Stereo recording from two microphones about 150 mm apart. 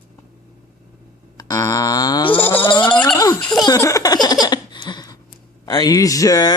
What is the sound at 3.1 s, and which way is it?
Speech, 20° left (ahead or behind).